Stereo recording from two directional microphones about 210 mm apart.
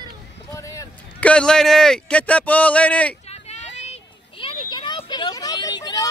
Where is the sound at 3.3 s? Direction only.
30° left (ahead or behind).